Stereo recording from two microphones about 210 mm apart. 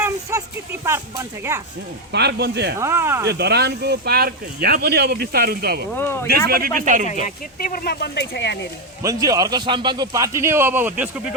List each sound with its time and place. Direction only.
0.0 s a sound: 10° right (ahead or behind)
2.1 s speech: 50° right (ahead or behind)
2.7 s a man's voice: 10° right (ahead or behind)
3.2 s speech: 50° right (ahead or behind)
5.9 s speech: 10° left (ahead or behind)
6.5 s speech: 45° right (ahead or behind)
7.1 s speech: 40° left (ahead or behind); by 8.5 s 55° left (ahead or behind)
9.0 s a man's voice: 15° right (ahead or behind)